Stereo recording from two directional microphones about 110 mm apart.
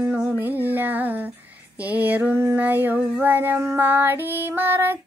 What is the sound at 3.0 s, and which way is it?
Female singing, 15° right (ahead or behind).